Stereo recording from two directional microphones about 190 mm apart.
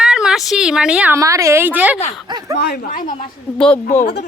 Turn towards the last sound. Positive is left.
turn(degrees=40)  # may be behind; listen again after turning